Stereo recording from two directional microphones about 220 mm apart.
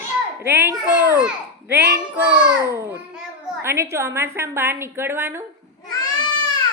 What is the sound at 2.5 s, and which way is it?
A child's voice, 15° right (ahead or behind).